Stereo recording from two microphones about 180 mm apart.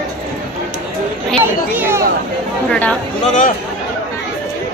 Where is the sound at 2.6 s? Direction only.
5° left (ahead or behind).